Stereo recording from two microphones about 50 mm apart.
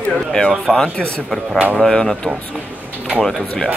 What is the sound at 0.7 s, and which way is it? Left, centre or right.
Speech, centre.